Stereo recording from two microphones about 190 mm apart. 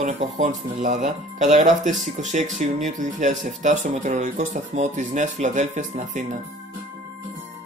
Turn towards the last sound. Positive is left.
turn(degrees=-40)  # may be behind; listen again after turning